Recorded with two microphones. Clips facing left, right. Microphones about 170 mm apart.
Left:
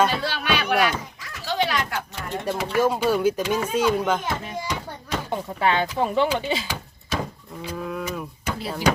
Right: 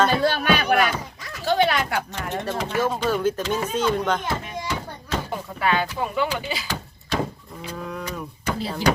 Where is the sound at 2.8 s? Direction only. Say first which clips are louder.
Left 3 dB; 10° left (ahead or behind).